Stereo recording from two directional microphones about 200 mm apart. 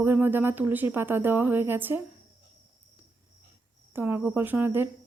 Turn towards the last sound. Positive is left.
turn(degrees=-10)  # may be behind; listen again after turning